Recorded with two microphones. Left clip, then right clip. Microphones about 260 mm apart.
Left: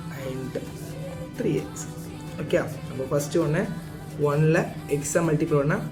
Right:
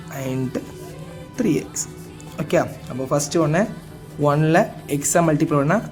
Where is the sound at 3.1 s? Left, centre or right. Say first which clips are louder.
Right 5 dB; right.